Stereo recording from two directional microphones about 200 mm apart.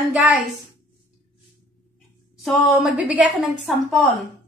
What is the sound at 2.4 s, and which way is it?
A woman's voice, centre (ahead or behind).